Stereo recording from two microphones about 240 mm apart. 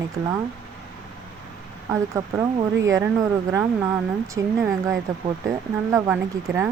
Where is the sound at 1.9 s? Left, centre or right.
Centre.